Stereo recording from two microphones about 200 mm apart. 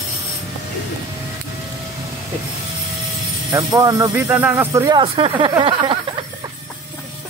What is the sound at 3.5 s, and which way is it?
Speech, 15° right (ahead or behind).